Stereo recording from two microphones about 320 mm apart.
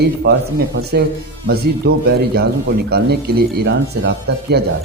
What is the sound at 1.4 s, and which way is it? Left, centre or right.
Speech, right.